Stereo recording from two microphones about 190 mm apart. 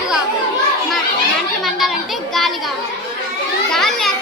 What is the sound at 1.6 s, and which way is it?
Children playing, centre (ahead or behind).